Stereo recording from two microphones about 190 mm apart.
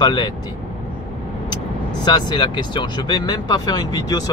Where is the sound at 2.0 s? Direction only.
25° left (ahead or behind).